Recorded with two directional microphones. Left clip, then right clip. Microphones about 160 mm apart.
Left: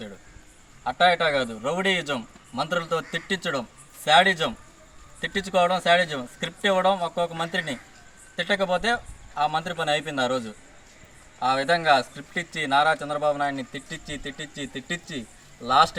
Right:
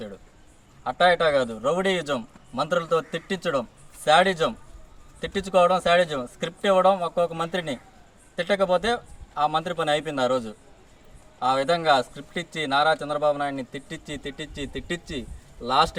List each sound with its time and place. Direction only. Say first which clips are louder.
1.0 s a man's voice: right 1 dB; 25° right (ahead or behind)
11.4 s a man's voice: even; 30° right (ahead or behind)
15.2 s a sound: right 2 dB; centre (ahead or behind)